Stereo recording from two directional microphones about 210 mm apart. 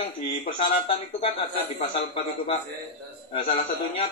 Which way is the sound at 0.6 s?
25° left (ahead or behind).